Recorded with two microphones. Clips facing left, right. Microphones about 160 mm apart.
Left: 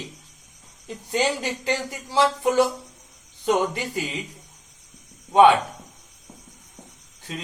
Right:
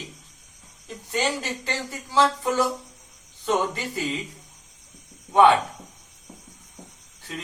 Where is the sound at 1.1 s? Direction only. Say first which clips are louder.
Left 3 dB; 15° left (ahead or behind).